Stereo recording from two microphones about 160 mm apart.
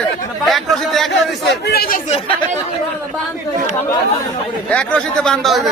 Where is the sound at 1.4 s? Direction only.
85° left.